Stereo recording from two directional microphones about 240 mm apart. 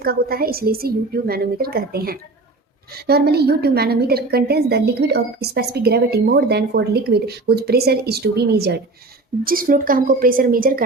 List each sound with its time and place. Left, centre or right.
0.0 s a woman's voice: right